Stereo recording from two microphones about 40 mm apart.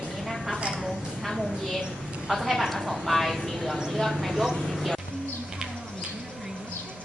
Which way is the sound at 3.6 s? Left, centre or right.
Centre.